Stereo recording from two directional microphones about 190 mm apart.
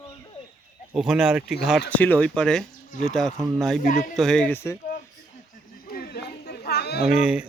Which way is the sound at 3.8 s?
40° left (ahead or behind).